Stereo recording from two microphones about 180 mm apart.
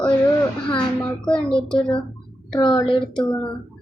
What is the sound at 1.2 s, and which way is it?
Speech, 5° left (ahead or behind).